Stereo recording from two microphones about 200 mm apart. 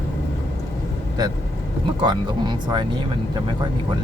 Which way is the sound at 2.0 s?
20° right (ahead or behind).